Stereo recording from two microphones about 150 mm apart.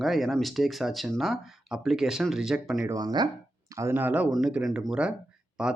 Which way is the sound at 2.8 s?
25° right (ahead or behind).